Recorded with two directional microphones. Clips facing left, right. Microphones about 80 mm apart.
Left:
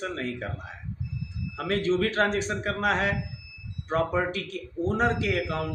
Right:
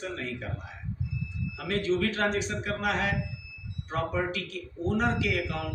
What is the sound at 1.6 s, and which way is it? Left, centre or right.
A man's voice, left.